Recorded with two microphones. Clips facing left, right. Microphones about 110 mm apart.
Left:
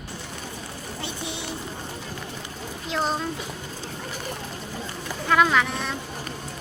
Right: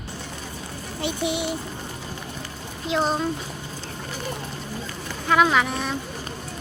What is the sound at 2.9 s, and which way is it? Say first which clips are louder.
Speech: right 3 dB; centre (ahead or behind).